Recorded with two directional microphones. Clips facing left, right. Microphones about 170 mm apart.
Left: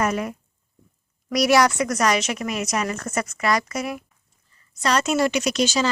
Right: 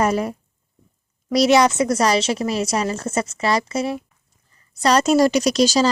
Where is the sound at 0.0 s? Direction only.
30° right (ahead or behind).